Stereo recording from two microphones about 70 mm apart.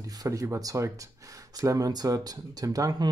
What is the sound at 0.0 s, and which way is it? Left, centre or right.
Speech, right.